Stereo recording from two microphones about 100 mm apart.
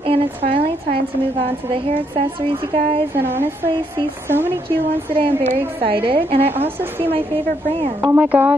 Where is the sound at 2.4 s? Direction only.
65° right (ahead or behind).